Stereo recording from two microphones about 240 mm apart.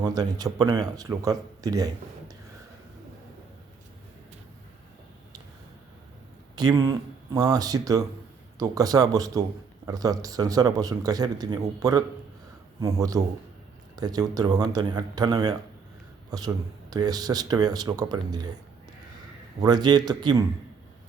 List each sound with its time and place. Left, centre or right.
0.0 s speech: centre
6.6 s speech: centre
16.9 s speech: centre
19.5 s speech: centre